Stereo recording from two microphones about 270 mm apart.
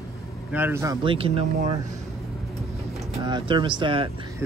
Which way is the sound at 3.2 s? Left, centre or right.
Centre.